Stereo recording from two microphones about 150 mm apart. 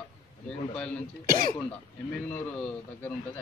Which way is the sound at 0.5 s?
5° left (ahead or behind).